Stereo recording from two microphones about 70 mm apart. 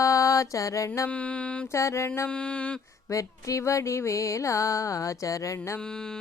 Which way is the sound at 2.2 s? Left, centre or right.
Centre.